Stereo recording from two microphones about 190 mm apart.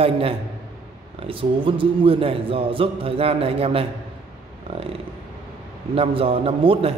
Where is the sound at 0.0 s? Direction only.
30° right (ahead or behind).